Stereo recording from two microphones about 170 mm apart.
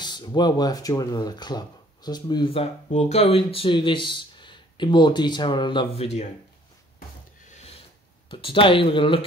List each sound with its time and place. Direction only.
0.0 s speech: 25° left (ahead or behind)
7.4 s a sound: 45° left (ahead or behind)
8.3 s speech: 30° left (ahead or behind)